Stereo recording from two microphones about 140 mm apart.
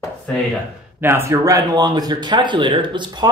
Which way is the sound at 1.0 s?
15° right (ahead or behind).